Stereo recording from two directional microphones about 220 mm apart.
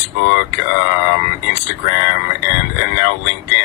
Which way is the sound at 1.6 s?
50° left (ahead or behind).